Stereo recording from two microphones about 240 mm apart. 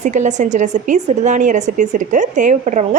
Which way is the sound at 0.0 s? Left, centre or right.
Right.